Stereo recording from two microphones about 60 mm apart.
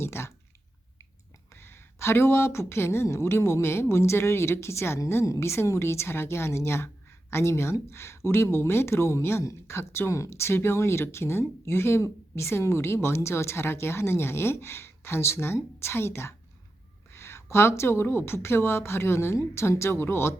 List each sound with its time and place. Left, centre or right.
0.0 s clicking: left
1.5 s a woman's voice: left